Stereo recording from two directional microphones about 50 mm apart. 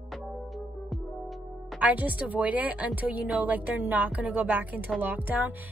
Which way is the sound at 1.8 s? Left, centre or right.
Right.